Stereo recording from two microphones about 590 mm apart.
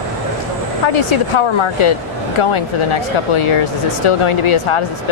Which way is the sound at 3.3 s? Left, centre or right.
Left.